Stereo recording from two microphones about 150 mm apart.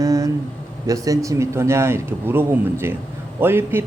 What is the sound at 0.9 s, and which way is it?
A man's voice, 20° right (ahead or behind).